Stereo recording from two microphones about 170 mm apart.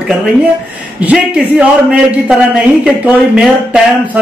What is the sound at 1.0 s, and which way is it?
A man's voice, 5° right (ahead or behind).